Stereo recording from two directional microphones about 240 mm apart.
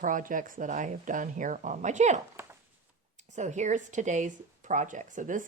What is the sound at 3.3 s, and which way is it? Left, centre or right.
Speech, right.